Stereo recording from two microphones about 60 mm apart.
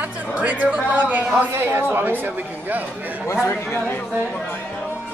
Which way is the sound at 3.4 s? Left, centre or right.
Left.